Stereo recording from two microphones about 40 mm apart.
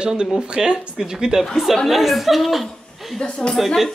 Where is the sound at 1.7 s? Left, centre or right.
Centre.